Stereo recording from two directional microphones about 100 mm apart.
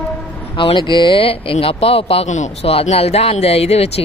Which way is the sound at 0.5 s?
55° left (ahead or behind).